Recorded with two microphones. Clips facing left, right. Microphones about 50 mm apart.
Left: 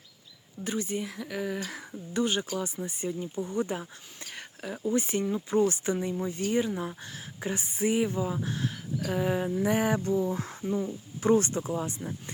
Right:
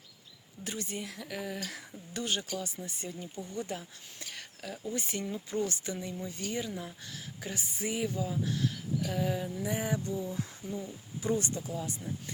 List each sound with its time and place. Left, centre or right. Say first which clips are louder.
0.6 s speech: left 7 dB; centre
1.5 s speech: left 5 dB; centre
2.4 s speech: left 5 dB; left
4.4 s a sound: left 6 dB; left
4.9 s speech: left 9 dB; centre; by 9.6 s left
9.6 s speech: left 7 dB; left